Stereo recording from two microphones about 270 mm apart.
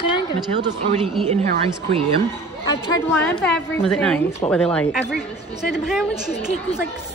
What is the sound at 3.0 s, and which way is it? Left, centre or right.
A woman's voice, centre.